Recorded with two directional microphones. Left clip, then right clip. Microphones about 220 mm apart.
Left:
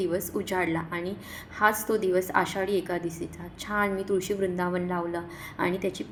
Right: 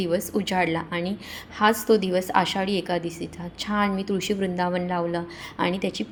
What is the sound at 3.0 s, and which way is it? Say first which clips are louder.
Speech: right 2 dB; 65° right (ahead or behind).